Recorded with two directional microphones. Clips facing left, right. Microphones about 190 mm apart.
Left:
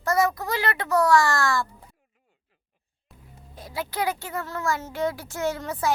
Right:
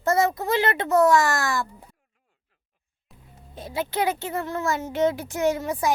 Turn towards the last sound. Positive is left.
turn(degrees=-15)  # may be behind; listen again after turning